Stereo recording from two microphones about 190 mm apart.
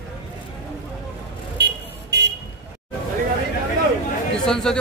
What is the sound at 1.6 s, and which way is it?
Vehicle, 65° right (ahead or behind).